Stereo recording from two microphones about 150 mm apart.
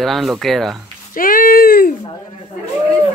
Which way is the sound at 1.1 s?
70° left (ahead or behind).